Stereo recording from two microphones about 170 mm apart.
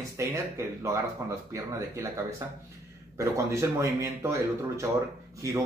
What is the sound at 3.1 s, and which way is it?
Speech, 15° right (ahead or behind).